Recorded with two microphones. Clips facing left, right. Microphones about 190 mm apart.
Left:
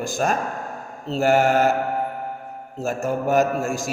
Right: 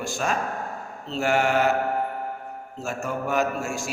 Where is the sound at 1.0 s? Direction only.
40° left (ahead or behind).